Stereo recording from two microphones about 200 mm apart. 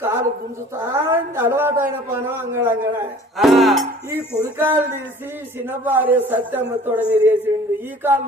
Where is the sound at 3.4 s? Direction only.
Centre (ahead or behind).